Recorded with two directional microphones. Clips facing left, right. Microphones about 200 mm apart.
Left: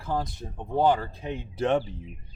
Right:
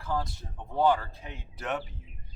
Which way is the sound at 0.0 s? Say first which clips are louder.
Left 2 dB; 20° left (ahead or behind).